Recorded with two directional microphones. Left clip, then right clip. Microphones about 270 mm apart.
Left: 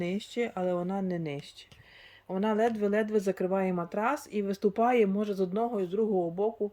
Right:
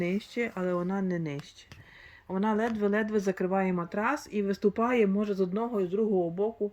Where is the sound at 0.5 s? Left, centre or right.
Centre.